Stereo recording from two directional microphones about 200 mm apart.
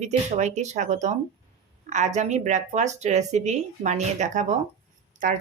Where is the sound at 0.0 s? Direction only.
35° right (ahead or behind).